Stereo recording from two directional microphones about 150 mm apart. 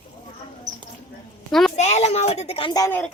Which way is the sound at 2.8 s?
20° left (ahead or behind).